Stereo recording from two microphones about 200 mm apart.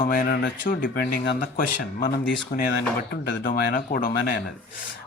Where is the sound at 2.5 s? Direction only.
50° left (ahead or behind).